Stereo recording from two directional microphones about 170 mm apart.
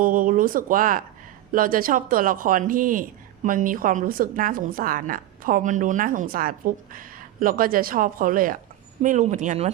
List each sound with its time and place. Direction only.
0.0 s speech: 55° right (ahead or behind)